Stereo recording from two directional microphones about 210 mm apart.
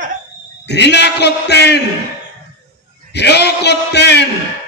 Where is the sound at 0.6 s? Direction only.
55° left (ahead or behind).